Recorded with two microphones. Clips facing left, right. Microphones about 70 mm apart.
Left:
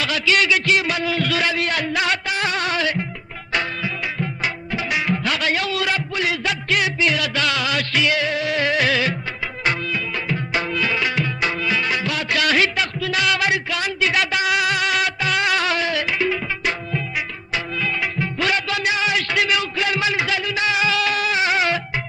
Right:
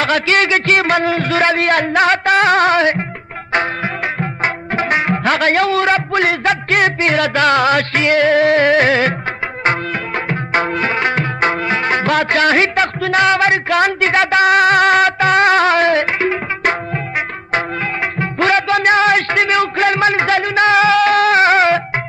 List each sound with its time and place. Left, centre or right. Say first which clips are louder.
0.0 s a man's voice: right 5 dB; right
3.5 s music: right 6 dB; right